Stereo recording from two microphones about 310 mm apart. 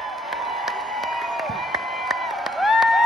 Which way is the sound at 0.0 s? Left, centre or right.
Centre.